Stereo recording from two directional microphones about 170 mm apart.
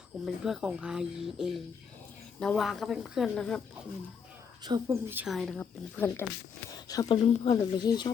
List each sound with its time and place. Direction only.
0.4 s speech: 5° right (ahead or behind)
4.6 s speech: 25° right (ahead or behind)
5.0 s a woman's voice: 10° right (ahead or behind)
5.3 s speech: centre (ahead or behind)
6.7 s speech: 20° left (ahead or behind)
7.6 s speech: 25° left (ahead or behind)